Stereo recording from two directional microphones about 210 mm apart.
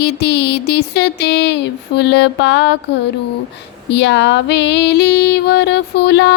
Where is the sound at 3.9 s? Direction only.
55° left (ahead or behind).